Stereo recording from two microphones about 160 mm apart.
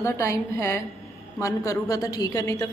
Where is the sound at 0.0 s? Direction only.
20° left (ahead or behind).